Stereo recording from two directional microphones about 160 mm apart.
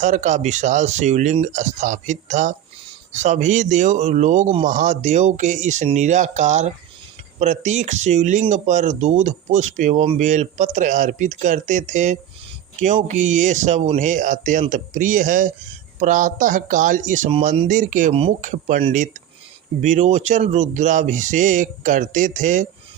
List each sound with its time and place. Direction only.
0.0 s speech: 50° right (ahead or behind)
18.1 s speech: 35° right (ahead or behind)
18.7 s speech: 55° right (ahead or behind)